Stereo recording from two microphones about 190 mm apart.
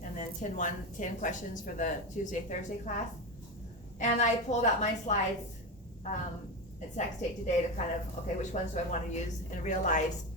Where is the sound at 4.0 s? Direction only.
40° left (ahead or behind).